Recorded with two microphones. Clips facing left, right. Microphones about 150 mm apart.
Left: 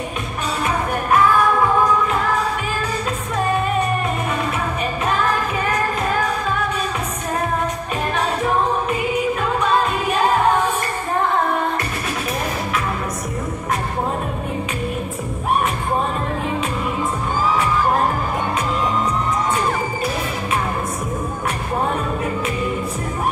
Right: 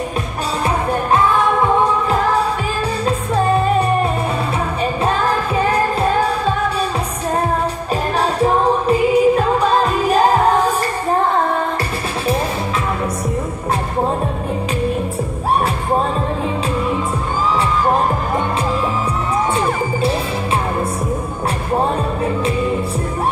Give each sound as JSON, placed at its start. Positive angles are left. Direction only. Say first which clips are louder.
{"t": 3.1, "sound": "music", "louder": "right 6 dB", "side_deg": -30}
{"t": 5.0, "sound": "music of asia", "louder": "right 1 dB", "side_deg": -30}
{"t": 8.2, "sound": "music of asia", "louder": "right 4 dB", "side_deg": -35}